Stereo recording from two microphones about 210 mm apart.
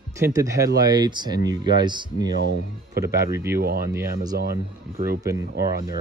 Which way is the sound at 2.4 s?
50° right (ahead or behind).